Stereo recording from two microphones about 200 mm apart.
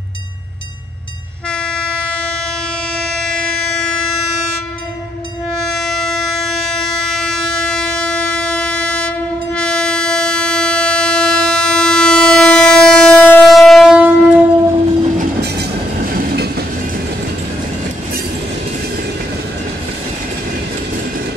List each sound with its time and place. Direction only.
1.5 s train: 5° left (ahead or behind)
3.2 s train: 5° left (ahead or behind)
5.6 s a sound: centre (ahead or behind)
16.2 s train: 55° right (ahead or behind)